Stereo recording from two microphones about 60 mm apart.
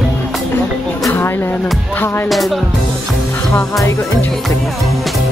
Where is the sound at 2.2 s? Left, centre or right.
Centre.